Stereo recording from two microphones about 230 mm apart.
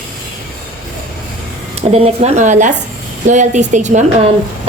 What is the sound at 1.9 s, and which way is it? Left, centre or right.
A woman's voice, right.